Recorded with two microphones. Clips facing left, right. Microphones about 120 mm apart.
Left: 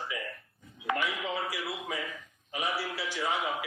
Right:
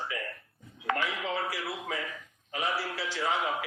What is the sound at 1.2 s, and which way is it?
Speech, 25° right (ahead or behind).